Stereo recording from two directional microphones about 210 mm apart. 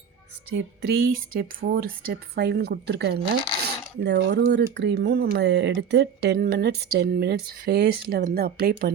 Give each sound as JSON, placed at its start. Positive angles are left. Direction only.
{"t": 0.5, "sound": "speech", "side_deg": -50}